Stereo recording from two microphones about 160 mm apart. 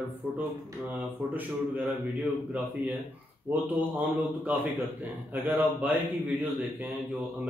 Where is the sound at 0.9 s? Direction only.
10° right (ahead or behind).